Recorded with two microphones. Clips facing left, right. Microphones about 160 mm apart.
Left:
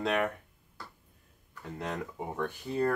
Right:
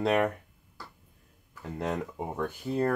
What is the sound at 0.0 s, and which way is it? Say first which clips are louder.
Speech: right 4 dB; 40° right (ahead or behind).